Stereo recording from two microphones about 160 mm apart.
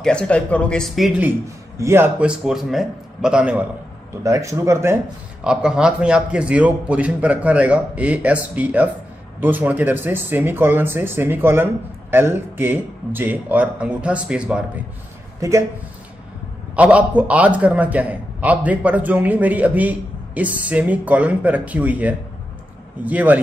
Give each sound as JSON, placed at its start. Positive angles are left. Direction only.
{"t": 0.0, "sound": "a man's voice", "side_deg": 5}
{"t": 4.2, "sound": "speech", "side_deg": -20}
{"t": 5.4, "sound": "a man's voice", "side_deg": -5}
{"t": 16.7, "sound": "a man's voice", "side_deg": -10}